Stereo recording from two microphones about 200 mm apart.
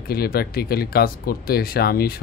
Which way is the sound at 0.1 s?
50° left (ahead or behind).